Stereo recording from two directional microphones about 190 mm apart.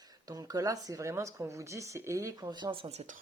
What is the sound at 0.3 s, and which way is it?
Speech, 20° right (ahead or behind).